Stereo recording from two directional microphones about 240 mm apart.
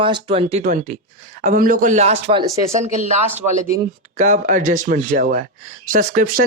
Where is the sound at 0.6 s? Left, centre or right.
Right.